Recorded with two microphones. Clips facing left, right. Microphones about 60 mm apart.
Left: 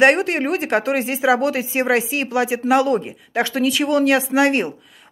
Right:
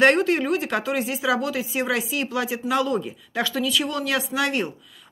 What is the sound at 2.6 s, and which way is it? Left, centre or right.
A woman's voice, left.